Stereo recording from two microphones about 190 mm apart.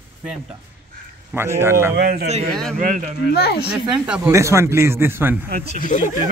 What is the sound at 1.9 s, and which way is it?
Speech, 55° right (ahead or behind).